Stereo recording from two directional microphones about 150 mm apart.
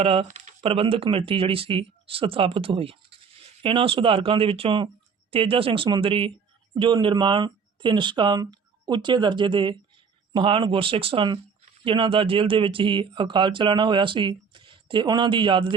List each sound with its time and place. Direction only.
0.0 s speech: 40° right (ahead or behind)
0.3 s a sound: 55° right (ahead or behind)
0.6 s speech: 40° right (ahead or behind)